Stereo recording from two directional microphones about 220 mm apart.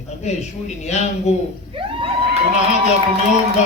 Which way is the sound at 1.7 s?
25° right (ahead or behind).